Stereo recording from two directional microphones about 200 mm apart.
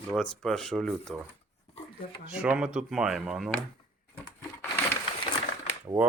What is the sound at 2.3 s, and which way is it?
Speech, 5° right (ahead or behind).